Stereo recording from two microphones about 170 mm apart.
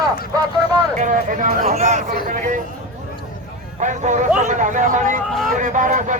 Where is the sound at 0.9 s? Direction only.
50° right (ahead or behind).